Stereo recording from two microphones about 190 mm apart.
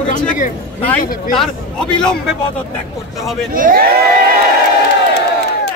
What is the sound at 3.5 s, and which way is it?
Speech, 50° right (ahead or behind).